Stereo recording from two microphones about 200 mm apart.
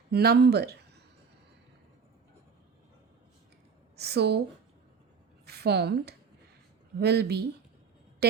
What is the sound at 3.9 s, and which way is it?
Speech, 55° right (ahead or behind).